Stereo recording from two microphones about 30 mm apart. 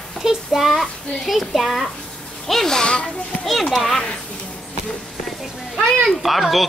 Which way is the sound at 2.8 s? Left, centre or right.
Left.